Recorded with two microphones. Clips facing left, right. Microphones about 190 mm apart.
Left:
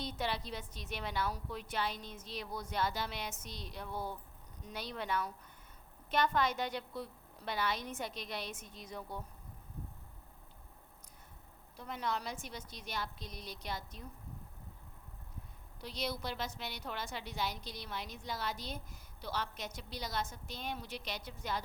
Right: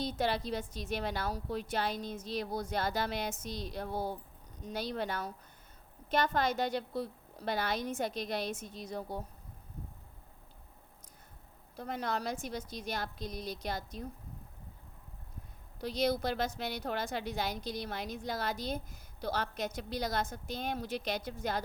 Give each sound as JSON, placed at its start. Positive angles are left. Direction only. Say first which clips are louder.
{"t": 0.0, "sound": "a woman's voice", "louder": "right 6 dB", "side_deg": -40}
{"t": 11.8, "sound": "a woman's voice", "louder": "right 3 dB", "side_deg": -45}
{"t": 15.8, "sound": "a woman's voice", "louder": "right 9 dB", "side_deg": -45}